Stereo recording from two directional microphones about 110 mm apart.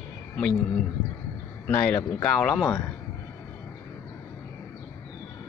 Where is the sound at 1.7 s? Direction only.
15° left (ahead or behind).